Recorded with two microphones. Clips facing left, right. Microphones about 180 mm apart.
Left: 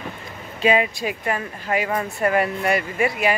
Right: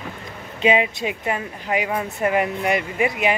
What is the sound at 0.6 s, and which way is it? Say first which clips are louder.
Speech: even; 20° right (ahead or behind).